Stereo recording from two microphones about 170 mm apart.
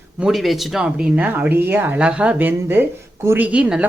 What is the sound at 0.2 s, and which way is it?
Speech, centre (ahead or behind).